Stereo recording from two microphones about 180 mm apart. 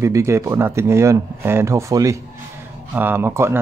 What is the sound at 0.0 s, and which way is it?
Speech, 15° right (ahead or behind).